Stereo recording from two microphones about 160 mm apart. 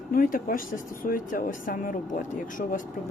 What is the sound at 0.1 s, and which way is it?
Speech, 65° left (ahead or behind).